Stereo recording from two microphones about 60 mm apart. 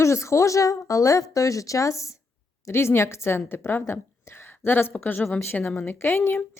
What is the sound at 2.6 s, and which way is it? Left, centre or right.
A woman's voice, left.